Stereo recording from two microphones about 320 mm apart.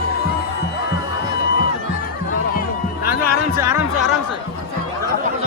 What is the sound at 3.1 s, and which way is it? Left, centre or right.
Music, centre.